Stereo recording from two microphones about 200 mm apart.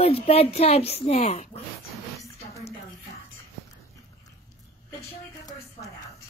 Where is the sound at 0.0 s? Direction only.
30° left (ahead or behind).